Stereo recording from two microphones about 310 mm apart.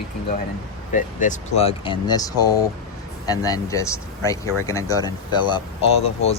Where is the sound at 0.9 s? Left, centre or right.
Left.